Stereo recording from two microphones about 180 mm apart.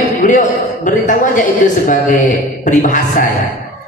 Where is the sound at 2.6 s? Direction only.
45° left (ahead or behind).